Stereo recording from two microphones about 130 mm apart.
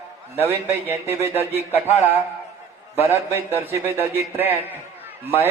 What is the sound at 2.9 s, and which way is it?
A man's voice, 20° right (ahead or behind).